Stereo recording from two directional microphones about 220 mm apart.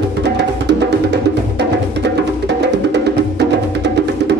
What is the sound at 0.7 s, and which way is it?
Music, 50° right (ahead or behind).